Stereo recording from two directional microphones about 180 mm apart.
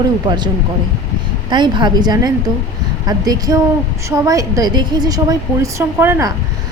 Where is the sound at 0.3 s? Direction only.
25° right (ahead or behind).